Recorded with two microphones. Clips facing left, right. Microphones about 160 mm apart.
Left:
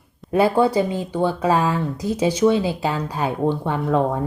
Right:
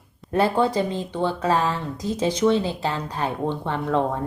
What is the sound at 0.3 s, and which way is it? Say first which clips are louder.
Speech: left 3 dB; 10° left (ahead or behind).